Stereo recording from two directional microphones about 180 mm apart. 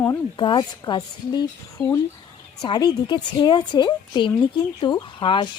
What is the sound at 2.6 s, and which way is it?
A woman's voice, 20° left (ahead or behind).